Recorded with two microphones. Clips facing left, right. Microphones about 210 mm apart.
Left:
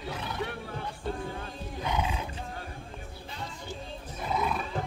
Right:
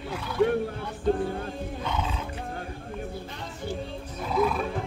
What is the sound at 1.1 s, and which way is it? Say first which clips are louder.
Speech: right 7 dB; 55° right (ahead or behind).